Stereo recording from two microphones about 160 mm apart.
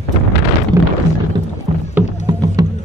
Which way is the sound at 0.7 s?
20° right (ahead or behind).